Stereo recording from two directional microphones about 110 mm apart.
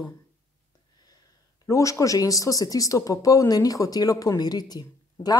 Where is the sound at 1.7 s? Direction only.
30° left (ahead or behind).